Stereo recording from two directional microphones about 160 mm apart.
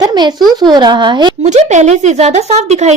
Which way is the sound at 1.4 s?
45° right (ahead or behind).